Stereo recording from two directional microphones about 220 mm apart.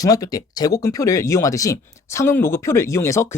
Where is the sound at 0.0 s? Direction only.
15° left (ahead or behind).